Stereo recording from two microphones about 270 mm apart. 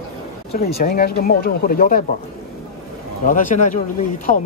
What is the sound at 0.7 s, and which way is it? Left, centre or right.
Speech, left.